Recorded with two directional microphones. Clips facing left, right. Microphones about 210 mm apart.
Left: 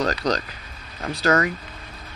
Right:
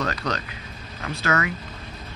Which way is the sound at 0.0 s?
35° left (ahead or behind).